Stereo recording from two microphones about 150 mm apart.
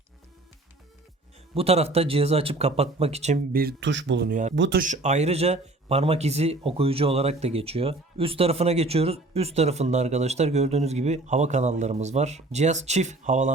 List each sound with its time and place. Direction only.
1.5 s a man's voice: 45° right (ahead or behind)
3.5 s speech: 85° right
4.3 s a man's voice: 60° right (ahead or behind)